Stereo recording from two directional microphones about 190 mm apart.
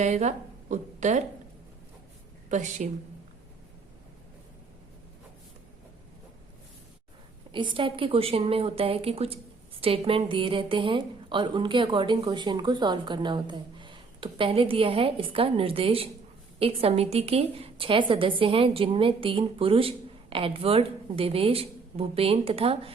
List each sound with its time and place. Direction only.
0.0 s a woman's voice: 40° right (ahead or behind)
2.5 s a woman's voice: 40° right (ahead or behind)
7.5 s a woman's voice: 25° right (ahead or behind)